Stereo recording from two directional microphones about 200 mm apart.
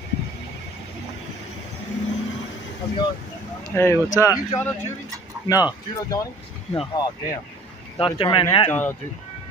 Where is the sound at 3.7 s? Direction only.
10° left (ahead or behind).